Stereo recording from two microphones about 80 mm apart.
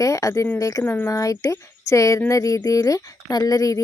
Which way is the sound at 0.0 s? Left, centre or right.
Left.